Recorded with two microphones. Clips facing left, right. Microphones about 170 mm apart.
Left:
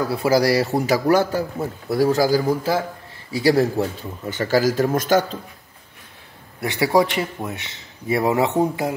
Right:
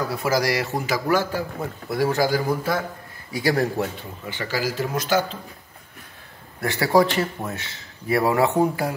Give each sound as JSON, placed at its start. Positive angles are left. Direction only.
{"t": 0.1, "sound": "a man's voice", "side_deg": 30}
{"t": 4.3, "sound": "speech", "side_deg": 45}
{"t": 6.6, "sound": "speech", "side_deg": 20}